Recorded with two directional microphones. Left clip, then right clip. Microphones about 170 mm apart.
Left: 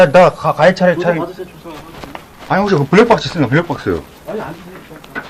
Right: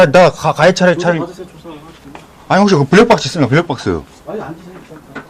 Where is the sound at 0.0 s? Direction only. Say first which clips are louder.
Even; 55° right (ahead or behind).